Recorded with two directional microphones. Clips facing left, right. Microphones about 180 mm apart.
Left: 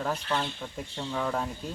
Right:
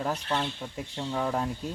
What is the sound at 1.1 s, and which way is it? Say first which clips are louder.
Speech: right 1 dB; 15° right (ahead or behind).